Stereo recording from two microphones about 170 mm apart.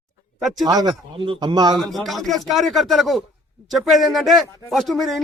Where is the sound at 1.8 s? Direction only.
Centre (ahead or behind).